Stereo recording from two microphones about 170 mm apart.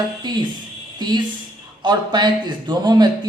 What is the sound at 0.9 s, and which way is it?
A man's voice, 25° right (ahead or behind).